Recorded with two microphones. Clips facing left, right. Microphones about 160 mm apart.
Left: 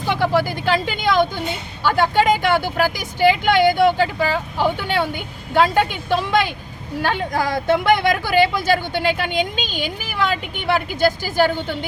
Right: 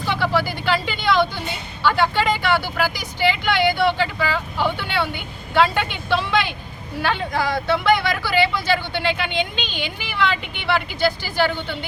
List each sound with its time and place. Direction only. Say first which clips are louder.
0.0 s vehicle: left 3 dB; 15° left (ahead or behind)
0.4 s vehicle: left 2 dB; 45° left (ahead or behind)
1.8 s speech: left 2 dB; 45° left (ahead or behind)